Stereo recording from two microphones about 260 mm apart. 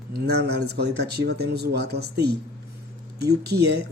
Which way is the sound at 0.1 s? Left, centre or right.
Right.